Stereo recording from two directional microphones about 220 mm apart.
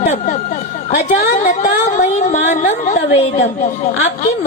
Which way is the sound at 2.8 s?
30° left (ahead or behind).